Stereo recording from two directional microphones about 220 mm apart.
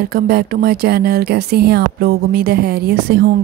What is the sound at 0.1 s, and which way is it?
Speech, 45° right (ahead or behind).